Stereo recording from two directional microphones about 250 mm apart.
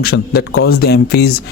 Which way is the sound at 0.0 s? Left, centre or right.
Left.